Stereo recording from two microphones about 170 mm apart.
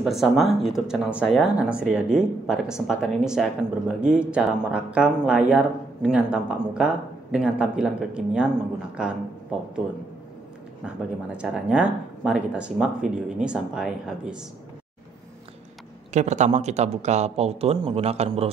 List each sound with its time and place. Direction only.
0.0 s speech: centre (ahead or behind)
11.3 s speech: 5° right (ahead or behind)
16.1 s a man's voice: 45° right (ahead or behind)